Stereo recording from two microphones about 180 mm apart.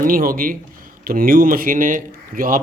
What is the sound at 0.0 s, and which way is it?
Speech, 55° right (ahead or behind).